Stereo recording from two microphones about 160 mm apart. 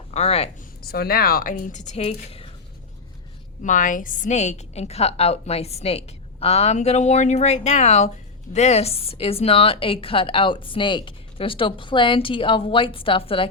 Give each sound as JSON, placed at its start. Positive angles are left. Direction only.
{"t": 0.1, "sound": "speech", "side_deg": 40}
{"t": 0.8, "sound": "speech", "side_deg": 75}
{"t": 3.6, "sound": "a woman's voice", "side_deg": 55}